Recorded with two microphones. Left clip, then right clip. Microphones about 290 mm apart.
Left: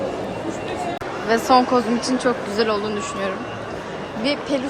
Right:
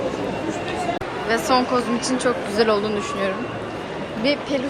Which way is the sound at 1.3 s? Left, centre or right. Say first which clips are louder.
Left 3 dB; centre.